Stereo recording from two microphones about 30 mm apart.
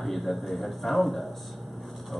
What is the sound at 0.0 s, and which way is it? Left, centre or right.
Speech, centre.